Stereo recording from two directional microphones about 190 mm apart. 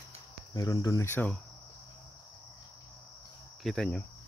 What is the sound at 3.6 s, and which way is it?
Cricket, 5° left (ahead or behind).